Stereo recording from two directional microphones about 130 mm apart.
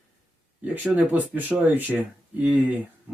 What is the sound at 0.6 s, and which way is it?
Speech, 15° right (ahead or behind).